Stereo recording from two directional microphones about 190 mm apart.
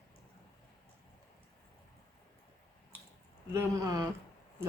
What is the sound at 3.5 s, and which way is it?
Speech, 15° right (ahead or behind).